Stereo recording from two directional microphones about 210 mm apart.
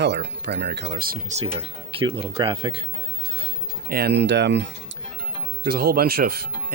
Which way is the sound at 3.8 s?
50° right (ahead or behind).